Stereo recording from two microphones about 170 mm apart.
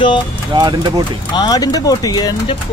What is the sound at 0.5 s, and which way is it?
Speech, 25° right (ahead or behind).